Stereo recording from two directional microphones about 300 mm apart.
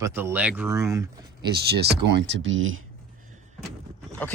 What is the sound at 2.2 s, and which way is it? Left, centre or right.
Speech, right.